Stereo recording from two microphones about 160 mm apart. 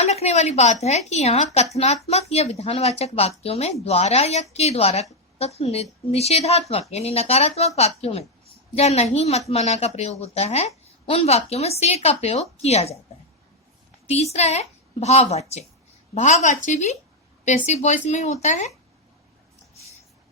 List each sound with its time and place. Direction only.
0.0 s a woman's voice: 45° left (ahead or behind)
14.1 s a woman's voice: 40° left (ahead or behind)